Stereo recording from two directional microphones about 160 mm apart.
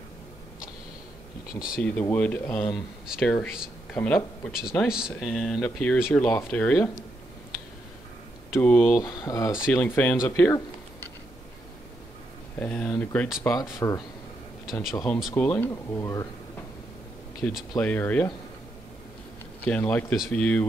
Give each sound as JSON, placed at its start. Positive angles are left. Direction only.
{"t": 1.5, "sound": "speech", "side_deg": 60}
{"t": 1.8, "sound": "speech", "side_deg": 10}
{"t": 4.5, "sound": "speech", "side_deg": -5}
{"t": 8.5, "sound": "speech", "side_deg": 10}
{"t": 9.7, "sound": "speech", "side_deg": 10}
{"t": 10.2, "sound": "a sound", "side_deg": 15}
{"t": 12.5, "sound": "speech", "side_deg": 5}
{"t": 13.4, "sound": "speech", "side_deg": 20}
{"t": 14.7, "sound": "speech", "side_deg": 0}
{"t": 15.3, "sound": "speech", "side_deg": 10}
{"t": 17.4, "sound": "speech", "side_deg": 0}
{"t": 19.6, "sound": "speech", "side_deg": 10}